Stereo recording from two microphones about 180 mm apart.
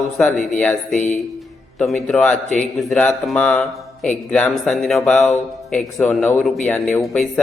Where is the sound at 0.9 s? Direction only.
45° left (ahead or behind).